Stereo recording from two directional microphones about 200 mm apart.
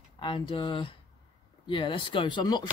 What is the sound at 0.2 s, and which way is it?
Speech, 25° left (ahead or behind).